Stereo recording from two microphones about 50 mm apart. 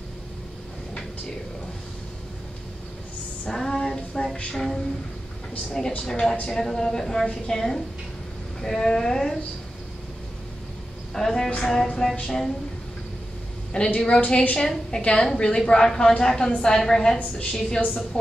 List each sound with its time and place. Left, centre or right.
3.4 s female singing: centre
4.6 s music: centre
5.7 s a woman's voice: centre
11.1 s a woman's voice: centre
13.9 s a woman's voice: left